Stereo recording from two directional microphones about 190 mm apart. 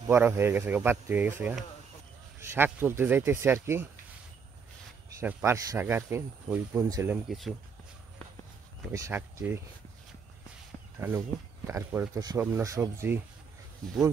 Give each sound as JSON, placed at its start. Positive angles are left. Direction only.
{"t": 0.0, "sound": "speech", "side_deg": -10}
{"t": 5.2, "sound": "speech", "side_deg": -15}
{"t": 7.2, "sound": "speech", "side_deg": 0}
{"t": 8.9, "sound": "speech", "side_deg": -15}
{"t": 11.0, "sound": "speech", "side_deg": -10}